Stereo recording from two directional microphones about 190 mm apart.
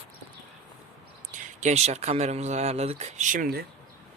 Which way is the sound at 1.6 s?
35° right (ahead or behind).